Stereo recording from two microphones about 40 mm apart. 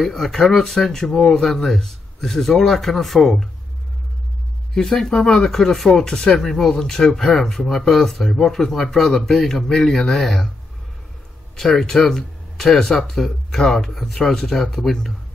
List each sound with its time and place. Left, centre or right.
0.0 s speech: centre
4.7 s speech: centre
11.5 s speech: centre